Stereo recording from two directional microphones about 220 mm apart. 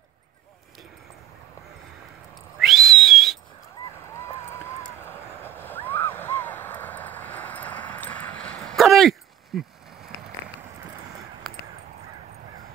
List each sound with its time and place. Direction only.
2.6 s whistle: centre (ahead or behind)
4.1 s a sound: 10° left (ahead or behind)
9.5 s speech: centre (ahead or behind)